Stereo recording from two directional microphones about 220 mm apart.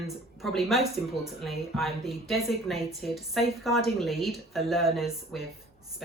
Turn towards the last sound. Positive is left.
turn(degrees=0)  # may be behind; listen again after turning